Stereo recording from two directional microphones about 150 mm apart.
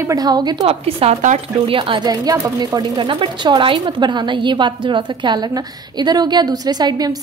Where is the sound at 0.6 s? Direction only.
40° right (ahead or behind).